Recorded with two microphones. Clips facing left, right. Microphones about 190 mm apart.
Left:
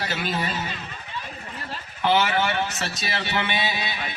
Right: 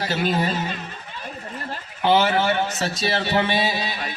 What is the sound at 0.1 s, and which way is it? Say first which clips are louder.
Speech: right 5 dB; 40° right (ahead or behind).